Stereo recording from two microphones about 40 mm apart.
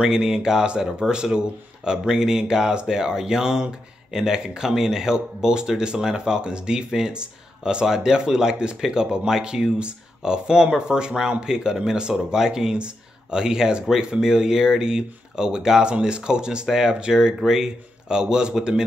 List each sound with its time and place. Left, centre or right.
0.0 s speech: centre